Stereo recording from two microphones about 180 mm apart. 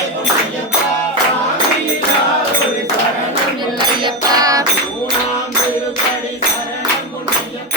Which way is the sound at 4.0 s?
20° right (ahead or behind).